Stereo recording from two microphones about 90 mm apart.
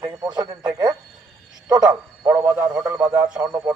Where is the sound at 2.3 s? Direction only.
40° right (ahead or behind).